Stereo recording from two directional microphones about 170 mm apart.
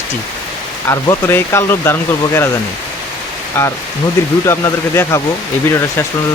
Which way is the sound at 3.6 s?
15° left (ahead or behind).